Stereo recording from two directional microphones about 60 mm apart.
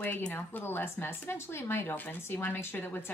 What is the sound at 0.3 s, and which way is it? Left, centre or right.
Speech, left.